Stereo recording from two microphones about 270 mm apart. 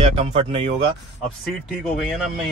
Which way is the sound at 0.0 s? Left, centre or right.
Right.